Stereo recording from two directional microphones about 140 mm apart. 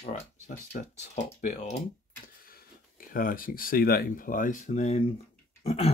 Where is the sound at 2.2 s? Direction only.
90° left; by 5.0 s 55° left (ahead or behind).